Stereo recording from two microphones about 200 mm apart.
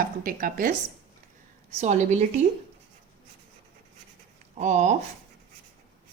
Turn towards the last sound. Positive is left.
turn(degrees=-35)  # may be behind; listen again after turning